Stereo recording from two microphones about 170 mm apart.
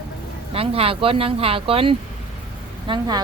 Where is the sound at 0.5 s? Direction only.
35° right (ahead or behind).